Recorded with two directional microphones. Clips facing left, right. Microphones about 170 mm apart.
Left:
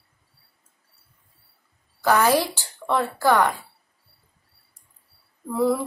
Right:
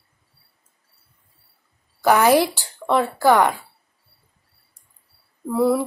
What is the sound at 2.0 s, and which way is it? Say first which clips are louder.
Speech: right 4 dB; 15° right (ahead or behind).